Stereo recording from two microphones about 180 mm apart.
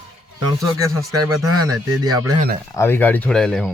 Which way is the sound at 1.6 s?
20° right (ahead or behind).